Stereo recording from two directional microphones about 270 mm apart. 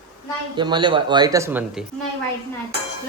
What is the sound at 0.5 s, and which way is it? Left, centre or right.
Speech, centre.